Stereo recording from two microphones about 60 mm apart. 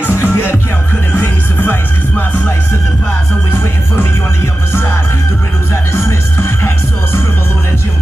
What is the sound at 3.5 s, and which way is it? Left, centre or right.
Music, left.